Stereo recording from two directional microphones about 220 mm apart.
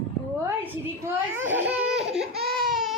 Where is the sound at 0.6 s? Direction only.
10° right (ahead or behind).